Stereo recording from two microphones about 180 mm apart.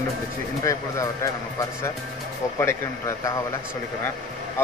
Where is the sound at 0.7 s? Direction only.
15° left (ahead or behind).